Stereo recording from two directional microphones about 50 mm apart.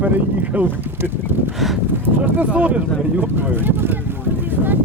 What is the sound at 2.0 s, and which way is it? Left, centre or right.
Speech, right.